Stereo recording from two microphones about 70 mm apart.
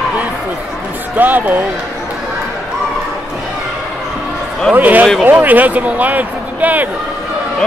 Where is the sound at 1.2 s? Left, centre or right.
Right.